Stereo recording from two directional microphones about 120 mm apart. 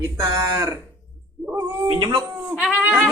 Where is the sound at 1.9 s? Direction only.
40° right (ahead or behind).